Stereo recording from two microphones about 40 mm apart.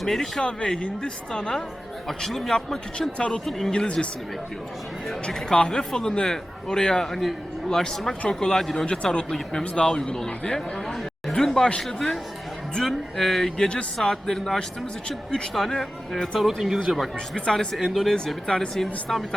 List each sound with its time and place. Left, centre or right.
0.0 s a man's voice: centre
0.4 s speech: left
2.0 s a man's voice: centre
3.2 s speech: left
5.5 s a man's voice: centre
13.7 s speech: left
14.1 s a man's voice: centre
16.1 s a man's voice: centre
16.4 s speech: centre
17.3 s speech: centre
17.7 s a man's voice: centre